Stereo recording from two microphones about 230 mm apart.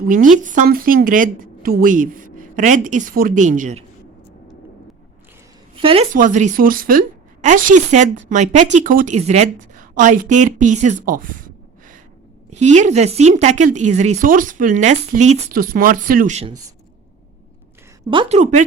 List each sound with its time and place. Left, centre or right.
0.4 s speech: right
5.7 s a woman's voice: right
18.1 s a woman's voice: right